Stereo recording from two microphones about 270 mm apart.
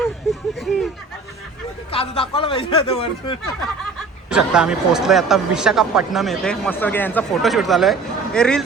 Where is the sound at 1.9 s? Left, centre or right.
Left.